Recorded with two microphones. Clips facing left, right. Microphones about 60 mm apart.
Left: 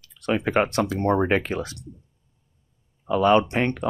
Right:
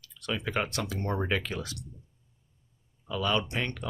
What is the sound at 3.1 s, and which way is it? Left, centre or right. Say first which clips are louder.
Speech: left 11 dB; left.